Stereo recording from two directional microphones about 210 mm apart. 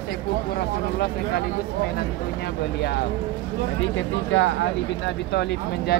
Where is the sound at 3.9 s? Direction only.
65° left (ahead or behind).